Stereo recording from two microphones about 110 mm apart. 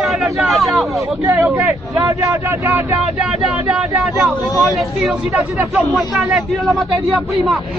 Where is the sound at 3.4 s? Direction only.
10° right (ahead or behind).